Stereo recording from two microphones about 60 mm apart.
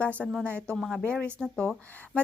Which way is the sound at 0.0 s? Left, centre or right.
Left.